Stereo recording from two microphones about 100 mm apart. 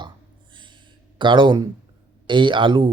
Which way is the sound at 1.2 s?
55° right (ahead or behind).